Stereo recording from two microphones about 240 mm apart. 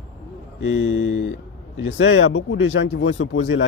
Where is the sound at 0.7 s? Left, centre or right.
Left.